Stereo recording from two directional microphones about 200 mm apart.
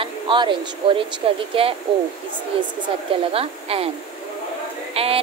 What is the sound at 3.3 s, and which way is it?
Speech, 30° right (ahead or behind).